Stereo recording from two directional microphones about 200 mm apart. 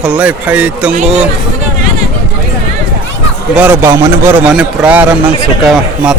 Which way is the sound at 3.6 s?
10° right (ahead or behind).